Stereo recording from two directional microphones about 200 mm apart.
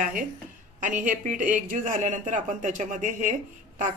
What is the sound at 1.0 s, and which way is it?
Speech, 40° right (ahead or behind).